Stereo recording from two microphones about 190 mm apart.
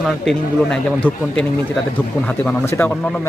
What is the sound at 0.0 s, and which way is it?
A man's voice, 5° left (ahead or behind).